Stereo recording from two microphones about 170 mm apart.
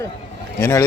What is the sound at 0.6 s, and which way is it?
Speech, 15° left (ahead or behind).